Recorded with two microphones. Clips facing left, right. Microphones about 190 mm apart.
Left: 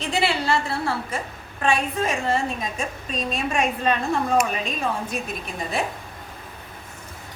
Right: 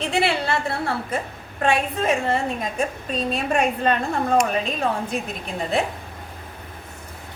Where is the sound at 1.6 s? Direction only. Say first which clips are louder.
Right 2 dB; 60° right (ahead or behind).